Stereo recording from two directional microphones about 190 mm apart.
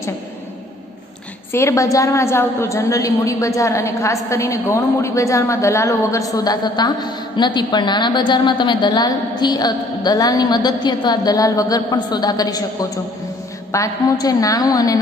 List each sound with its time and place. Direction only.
1.5 s a woman's voice: 15° left (ahead or behind)
13.7 s a woman's voice: 20° left (ahead or behind)